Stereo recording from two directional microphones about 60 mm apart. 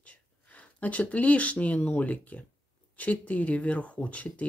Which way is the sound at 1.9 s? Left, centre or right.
Left.